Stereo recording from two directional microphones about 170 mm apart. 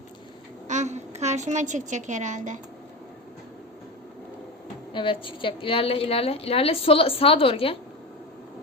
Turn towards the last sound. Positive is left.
turn(degrees=35)  # may be behind; listen again after turning